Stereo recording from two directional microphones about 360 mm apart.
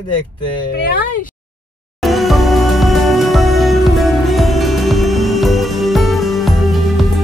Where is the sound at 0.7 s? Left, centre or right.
Left.